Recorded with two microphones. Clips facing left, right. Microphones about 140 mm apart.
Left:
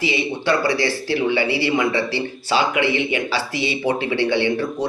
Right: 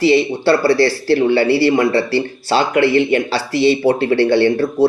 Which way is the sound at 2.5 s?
45° right (ahead or behind).